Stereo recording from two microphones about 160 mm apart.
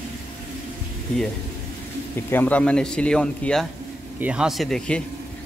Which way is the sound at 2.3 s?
10° left (ahead or behind).